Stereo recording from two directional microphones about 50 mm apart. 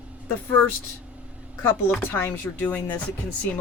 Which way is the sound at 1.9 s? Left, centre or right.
Left.